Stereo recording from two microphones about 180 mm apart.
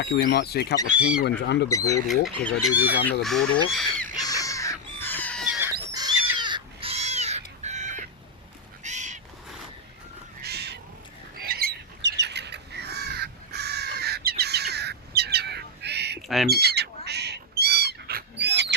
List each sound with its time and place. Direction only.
0.0 s speech: 70° left (ahead or behind)
0.9 s speech: 5° right (ahead or behind)
1.2 s speech: 75° left (ahead or behind)
1.7 s speech: 20° left (ahead or behind)
2.2 s speech: centre (ahead or behind)
4.2 s crow: 20° left (ahead or behind)
5.9 s a sound: 20° right (ahead or behind)
6.3 s crow: 25° right (ahead or behind); by 8.0 s 40° right (ahead or behind)
8.8 s bird: 40° right (ahead or behind)
10.4 s crow: 65° right (ahead or behind)
11.3 s squawk: 60° right (ahead or behind)
16.5 s bird: 65° right (ahead or behind)